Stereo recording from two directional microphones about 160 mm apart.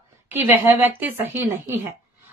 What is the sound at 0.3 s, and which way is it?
A woman's voice, 10° right (ahead or behind).